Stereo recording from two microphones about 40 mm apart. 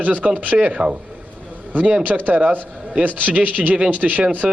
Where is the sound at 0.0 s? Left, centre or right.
Right.